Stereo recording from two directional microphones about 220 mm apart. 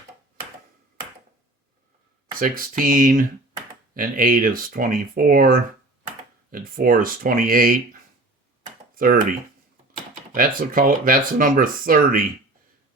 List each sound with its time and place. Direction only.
2.4 s speech: 40° right (ahead or behind)
10.3 s speech: 40° right (ahead or behind)